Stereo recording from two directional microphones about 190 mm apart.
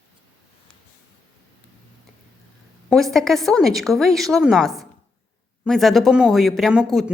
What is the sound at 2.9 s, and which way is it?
A woman's voice, centre (ahead or behind).